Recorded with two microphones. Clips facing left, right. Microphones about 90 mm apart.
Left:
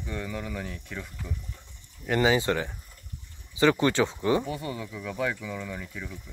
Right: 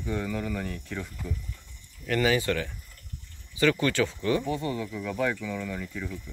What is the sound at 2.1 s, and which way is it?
A man's voice, 25° left (ahead or behind).